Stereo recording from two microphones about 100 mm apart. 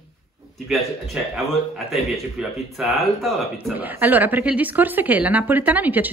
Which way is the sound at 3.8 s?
20° right (ahead or behind).